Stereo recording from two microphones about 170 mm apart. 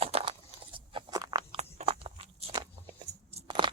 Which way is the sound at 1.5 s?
35° right (ahead or behind).